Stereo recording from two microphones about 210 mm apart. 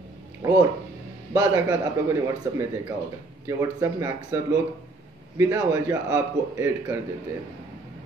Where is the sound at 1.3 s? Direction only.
15° right (ahead or behind).